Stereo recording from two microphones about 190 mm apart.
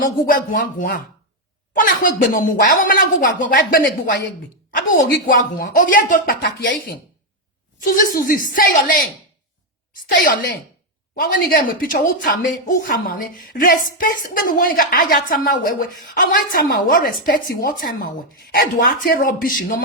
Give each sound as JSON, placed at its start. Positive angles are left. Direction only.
{"t": 0.0, "sound": "a woman's voice", "side_deg": 45}
{"t": 11.1, "sound": "a woman's voice", "side_deg": 45}